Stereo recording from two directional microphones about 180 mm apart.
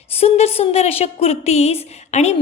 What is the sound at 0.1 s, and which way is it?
A woman's voice, 35° left (ahead or behind).